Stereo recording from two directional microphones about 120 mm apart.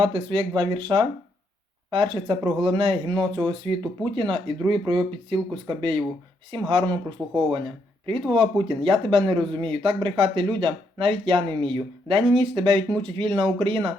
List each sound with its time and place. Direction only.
0.0 s speech: 45° right (ahead or behind)